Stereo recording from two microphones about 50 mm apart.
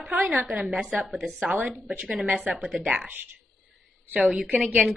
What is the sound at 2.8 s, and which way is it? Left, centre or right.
A woman's voice, right.